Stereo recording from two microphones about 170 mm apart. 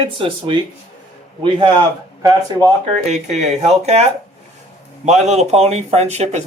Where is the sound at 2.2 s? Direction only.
20° right (ahead or behind).